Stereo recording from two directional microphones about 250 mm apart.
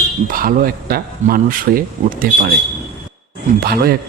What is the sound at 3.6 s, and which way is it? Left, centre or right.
Speech, right.